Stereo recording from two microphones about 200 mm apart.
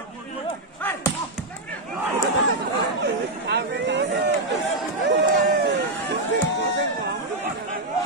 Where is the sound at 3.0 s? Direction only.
60° right (ahead or behind).